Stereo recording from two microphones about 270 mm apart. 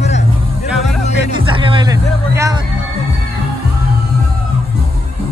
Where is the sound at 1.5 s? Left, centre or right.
Centre.